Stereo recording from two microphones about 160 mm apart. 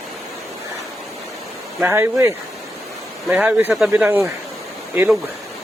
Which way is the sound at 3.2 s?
Centre (ahead or behind).